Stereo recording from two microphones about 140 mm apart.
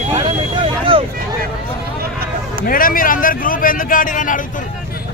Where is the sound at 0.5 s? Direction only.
35° right (ahead or behind).